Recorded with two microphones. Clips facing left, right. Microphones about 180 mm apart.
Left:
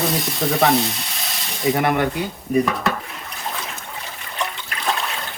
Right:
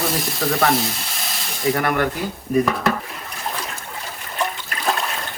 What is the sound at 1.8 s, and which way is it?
Speech, 20° left (ahead or behind).